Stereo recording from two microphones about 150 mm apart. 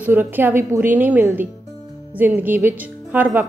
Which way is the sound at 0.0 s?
10° right (ahead or behind).